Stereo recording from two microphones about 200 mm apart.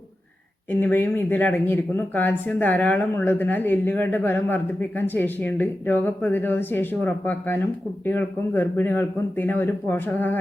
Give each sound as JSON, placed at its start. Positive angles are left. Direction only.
{"t": 0.7, "sound": "speech", "side_deg": 10}